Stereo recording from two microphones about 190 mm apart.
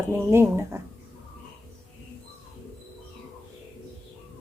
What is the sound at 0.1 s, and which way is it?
Speech, 15° right (ahead or behind).